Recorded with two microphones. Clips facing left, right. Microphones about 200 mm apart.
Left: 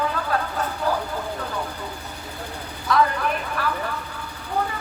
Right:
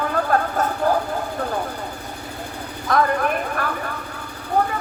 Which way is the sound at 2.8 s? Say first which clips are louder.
Right 2 dB; 50° right (ahead or behind).